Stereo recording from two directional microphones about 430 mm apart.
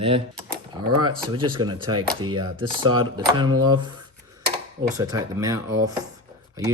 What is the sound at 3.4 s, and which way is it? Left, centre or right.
Speech, right.